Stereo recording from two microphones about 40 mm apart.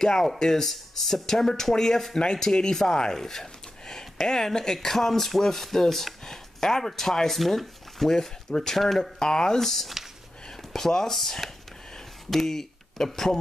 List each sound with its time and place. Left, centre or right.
0.0 s speech: centre
8.7 s speech: centre
9.3 s speech: centre